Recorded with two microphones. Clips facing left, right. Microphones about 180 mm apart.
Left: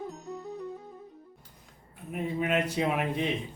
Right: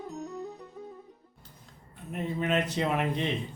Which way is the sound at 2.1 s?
10° left (ahead or behind).